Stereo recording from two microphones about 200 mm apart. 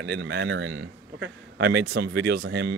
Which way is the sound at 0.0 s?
55° right (ahead or behind).